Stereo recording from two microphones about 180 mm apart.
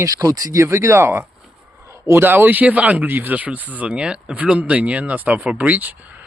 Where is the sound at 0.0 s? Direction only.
20° right (ahead or behind).